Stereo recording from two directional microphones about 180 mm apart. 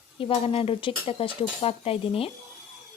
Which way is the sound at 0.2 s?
30° left (ahead or behind).